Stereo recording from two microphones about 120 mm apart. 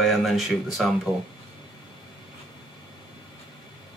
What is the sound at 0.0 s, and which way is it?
Speech, centre (ahead or behind).